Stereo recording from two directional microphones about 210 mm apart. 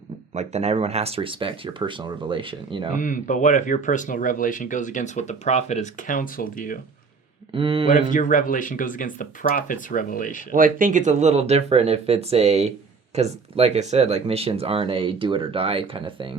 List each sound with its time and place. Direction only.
0.3 s speech: 30° right (ahead or behind)
2.9 s speech: 40° left (ahead or behind)
7.5 s speech: 25° right (ahead or behind)
8.1 s speech: 40° left (ahead or behind)
10.5 s speech: 40° right (ahead or behind); by 16.3 s 25° right (ahead or behind)